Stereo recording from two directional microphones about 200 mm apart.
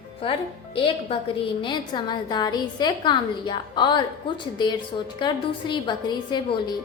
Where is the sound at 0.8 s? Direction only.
25° left (ahead or behind).